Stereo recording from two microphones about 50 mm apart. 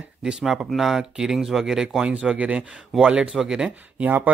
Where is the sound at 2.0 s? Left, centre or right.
Right.